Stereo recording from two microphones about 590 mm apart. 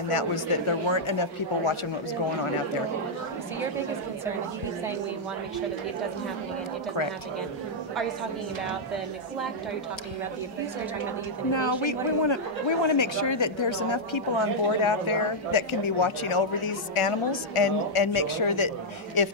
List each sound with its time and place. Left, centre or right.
0.1 s speech: left
11.5 s a woman's voice: left